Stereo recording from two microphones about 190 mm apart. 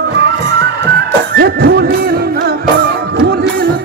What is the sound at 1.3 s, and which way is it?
Music, 55° right (ahead or behind).